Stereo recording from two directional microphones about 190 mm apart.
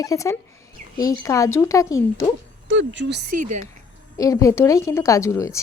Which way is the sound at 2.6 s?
70° right (ahead or behind).